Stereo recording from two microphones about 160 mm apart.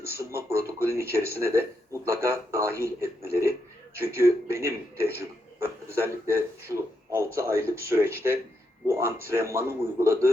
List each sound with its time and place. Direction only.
0.2 s speech: 15° right (ahead or behind)